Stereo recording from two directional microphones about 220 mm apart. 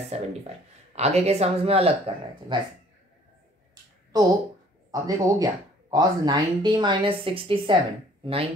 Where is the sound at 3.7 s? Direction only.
20° right (ahead or behind).